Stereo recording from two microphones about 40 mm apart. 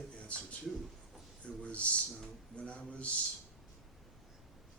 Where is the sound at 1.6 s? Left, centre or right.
Left.